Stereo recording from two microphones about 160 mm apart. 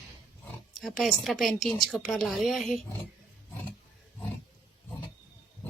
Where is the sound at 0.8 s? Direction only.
Centre (ahead or behind).